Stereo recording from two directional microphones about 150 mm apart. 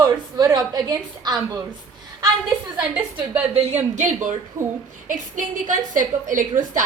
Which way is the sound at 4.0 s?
55° right (ahead or behind).